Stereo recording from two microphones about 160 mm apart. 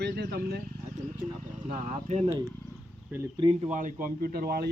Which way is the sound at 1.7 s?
55° right (ahead or behind).